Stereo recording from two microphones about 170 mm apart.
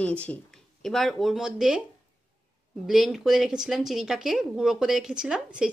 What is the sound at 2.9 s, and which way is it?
Speech, centre (ahead or behind).